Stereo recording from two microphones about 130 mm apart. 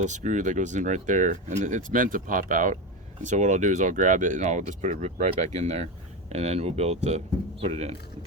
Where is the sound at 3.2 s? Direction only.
70° right (ahead or behind).